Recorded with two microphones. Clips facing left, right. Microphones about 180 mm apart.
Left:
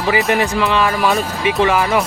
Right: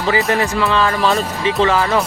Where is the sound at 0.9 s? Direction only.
Centre (ahead or behind).